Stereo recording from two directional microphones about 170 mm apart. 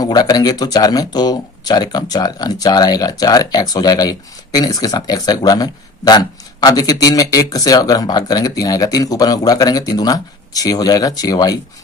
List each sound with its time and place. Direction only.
0.0 s speech: 25° left (ahead or behind)